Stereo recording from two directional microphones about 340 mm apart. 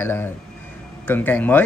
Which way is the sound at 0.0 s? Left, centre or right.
Centre.